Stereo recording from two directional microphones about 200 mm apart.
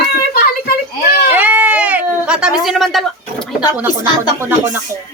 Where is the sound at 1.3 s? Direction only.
10° right (ahead or behind).